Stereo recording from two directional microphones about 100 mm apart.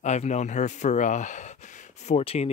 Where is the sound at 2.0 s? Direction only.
90° left.